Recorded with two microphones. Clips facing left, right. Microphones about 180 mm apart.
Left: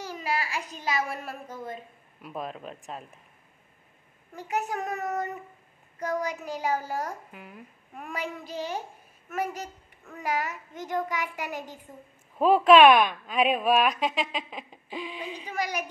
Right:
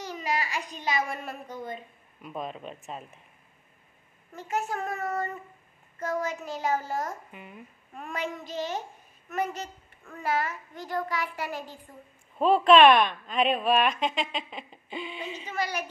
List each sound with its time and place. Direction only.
0.0 s a woman's voice: 5° left (ahead or behind)
4.4 s a child's voice: 15° left (ahead or behind)
7.3 s a woman's voice: centre (ahead or behind); by 11.8 s 20° left (ahead or behind)
12.4 s a woman's voice: 5° left (ahead or behind)
15.5 s a child's voice: 15° left (ahead or behind)